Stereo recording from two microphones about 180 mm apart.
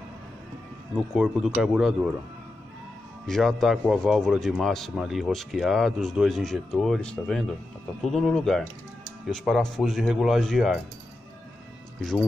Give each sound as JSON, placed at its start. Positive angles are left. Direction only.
{"t": 0.9, "sound": "speech", "side_deg": -5}
{"t": 3.3, "sound": "speech", "side_deg": 0}